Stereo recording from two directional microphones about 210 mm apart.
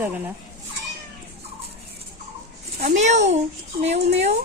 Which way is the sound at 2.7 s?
35° right (ahead or behind).